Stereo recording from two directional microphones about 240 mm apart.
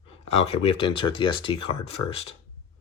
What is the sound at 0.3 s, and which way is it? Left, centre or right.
Speech, left.